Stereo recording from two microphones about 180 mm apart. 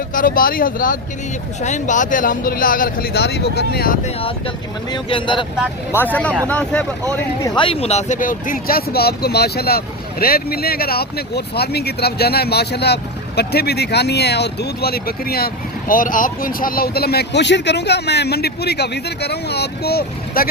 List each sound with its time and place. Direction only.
0.1 s speech: 50° left (ahead or behind)
4.0 s speech: 30° left (ahead or behind)
5.9 s speech: 10° left (ahead or behind)
7.4 s speech: 25° left (ahead or behind); by 20.5 s 60° left (ahead or behind)